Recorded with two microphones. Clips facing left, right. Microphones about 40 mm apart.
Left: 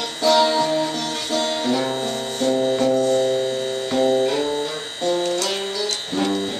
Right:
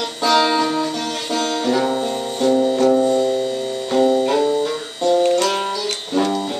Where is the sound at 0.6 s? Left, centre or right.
Right.